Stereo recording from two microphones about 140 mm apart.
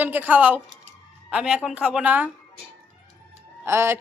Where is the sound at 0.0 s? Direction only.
15° right (ahead or behind).